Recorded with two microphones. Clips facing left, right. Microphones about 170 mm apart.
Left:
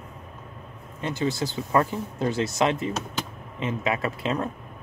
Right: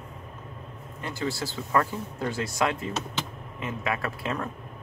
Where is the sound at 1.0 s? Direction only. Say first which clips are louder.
Left 4 dB; 20° left (ahead or behind).